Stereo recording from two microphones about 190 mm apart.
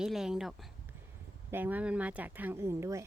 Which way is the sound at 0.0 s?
5° right (ahead or behind).